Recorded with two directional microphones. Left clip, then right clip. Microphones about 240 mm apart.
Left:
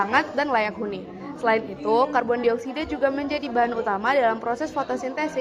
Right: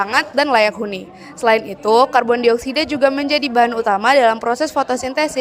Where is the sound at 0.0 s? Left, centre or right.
Right.